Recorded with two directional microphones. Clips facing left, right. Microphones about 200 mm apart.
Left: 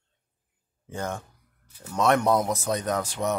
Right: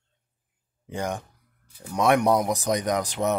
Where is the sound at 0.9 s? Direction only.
15° right (ahead or behind).